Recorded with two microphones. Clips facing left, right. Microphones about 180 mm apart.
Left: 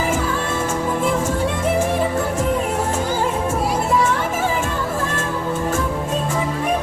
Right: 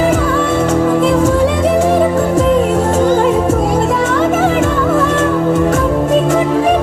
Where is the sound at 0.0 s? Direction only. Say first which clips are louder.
Right 8 dB; 65° right (ahead or behind).